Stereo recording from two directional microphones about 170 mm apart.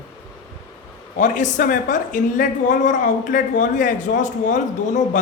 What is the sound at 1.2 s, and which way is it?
Speech, 45° left (ahead or behind).